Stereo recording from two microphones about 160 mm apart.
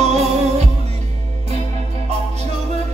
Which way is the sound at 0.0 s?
45° right (ahead or behind).